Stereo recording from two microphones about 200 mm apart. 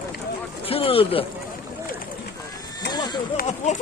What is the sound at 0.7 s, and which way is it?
Speech, 30° left (ahead or behind).